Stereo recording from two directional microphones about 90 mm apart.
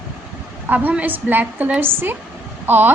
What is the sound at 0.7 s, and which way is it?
A woman's voice, 20° right (ahead or behind).